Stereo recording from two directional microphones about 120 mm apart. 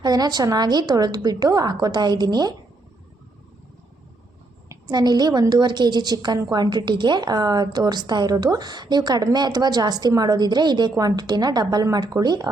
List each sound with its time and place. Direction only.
0.0 s a woman's voice: 35° right (ahead or behind)
4.7 s a woman's voice: 35° right (ahead or behind)